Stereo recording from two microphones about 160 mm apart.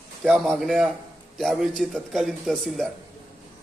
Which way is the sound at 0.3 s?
5° right (ahead or behind).